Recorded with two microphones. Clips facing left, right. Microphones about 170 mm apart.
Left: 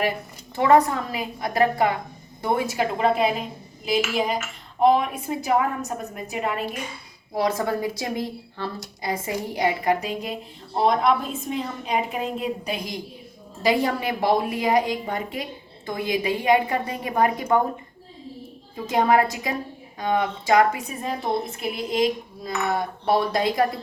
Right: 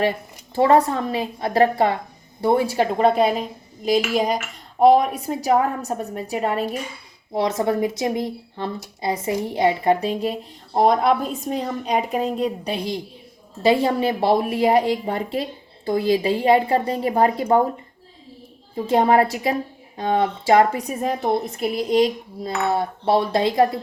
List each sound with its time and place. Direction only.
0.5 s cutlery: 30° right (ahead or behind)
2.4 s a woman's voice: 30° right (ahead or behind)
7.3 s cutlery: 25° right (ahead or behind)
10.8 s a woman's voice: 40° right (ahead or behind)
13.6 s cutlery: 30° right (ahead or behind)
15.9 s a woman's voice: 30° right (ahead or behind)
18.9 s a woman's voice: 30° right (ahead or behind)
21.0 s a woman's voice: 45° right (ahead or behind)
21.6 s cutlery: 35° right (ahead or behind)